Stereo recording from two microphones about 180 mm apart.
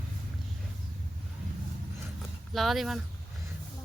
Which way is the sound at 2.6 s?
Centre (ahead or behind).